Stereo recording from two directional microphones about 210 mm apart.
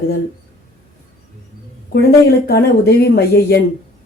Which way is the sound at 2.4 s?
50° left (ahead or behind).